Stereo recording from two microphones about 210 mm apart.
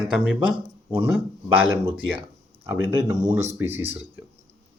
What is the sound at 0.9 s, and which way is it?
Speech, 10° right (ahead or behind).